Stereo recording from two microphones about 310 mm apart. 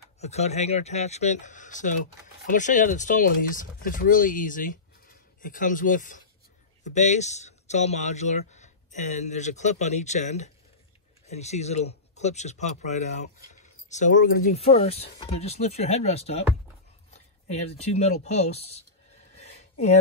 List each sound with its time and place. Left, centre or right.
0.2 s speech: left
17.8 s speech: left